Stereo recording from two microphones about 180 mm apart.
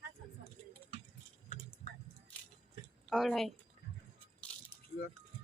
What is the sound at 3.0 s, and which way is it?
Speech, centre (ahead or behind).